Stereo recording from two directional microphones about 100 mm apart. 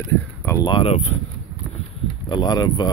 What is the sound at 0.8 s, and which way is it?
Speech, 90° left.